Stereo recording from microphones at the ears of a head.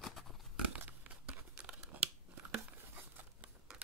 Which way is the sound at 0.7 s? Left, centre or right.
Right.